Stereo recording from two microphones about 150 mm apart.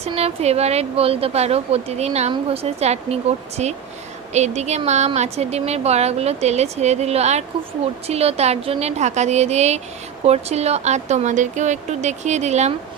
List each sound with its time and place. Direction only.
0.0 s speech: 45° right (ahead or behind)